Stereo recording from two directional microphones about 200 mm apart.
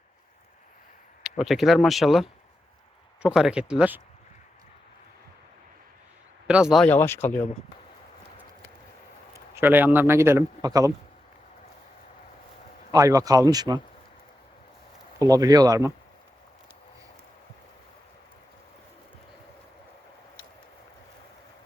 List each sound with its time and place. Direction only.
1.2 s speech: centre (ahead or behind)
6.5 s speech: 5° right (ahead or behind)
9.6 s a man's voice: 10° right (ahead or behind)
12.9 s a man's voice: 15° right (ahead or behind)
15.2 s a man's voice: 20° right (ahead or behind)